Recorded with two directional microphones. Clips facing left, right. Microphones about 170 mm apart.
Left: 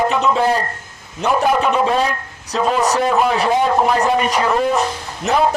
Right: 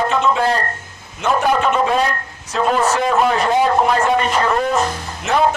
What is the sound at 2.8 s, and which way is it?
Speech, 15° left (ahead or behind).